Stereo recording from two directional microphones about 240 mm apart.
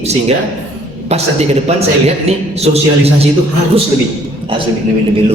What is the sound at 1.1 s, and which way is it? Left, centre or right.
A man's voice, right.